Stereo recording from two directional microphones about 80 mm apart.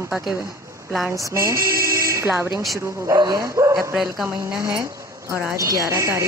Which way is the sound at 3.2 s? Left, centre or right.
Right.